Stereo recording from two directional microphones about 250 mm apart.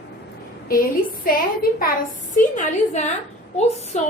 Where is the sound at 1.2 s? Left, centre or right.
Left.